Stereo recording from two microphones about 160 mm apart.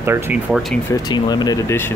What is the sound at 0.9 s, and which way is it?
Speech, 25° left (ahead or behind).